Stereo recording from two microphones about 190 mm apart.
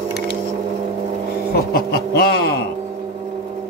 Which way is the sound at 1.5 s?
55° left (ahead or behind).